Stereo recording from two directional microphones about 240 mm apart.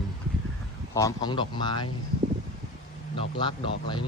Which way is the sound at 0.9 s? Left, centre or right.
Centre.